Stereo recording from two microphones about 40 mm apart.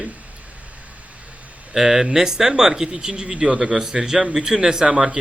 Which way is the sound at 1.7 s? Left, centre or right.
Centre.